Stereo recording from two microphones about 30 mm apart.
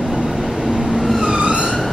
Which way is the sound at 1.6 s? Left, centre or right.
Centre.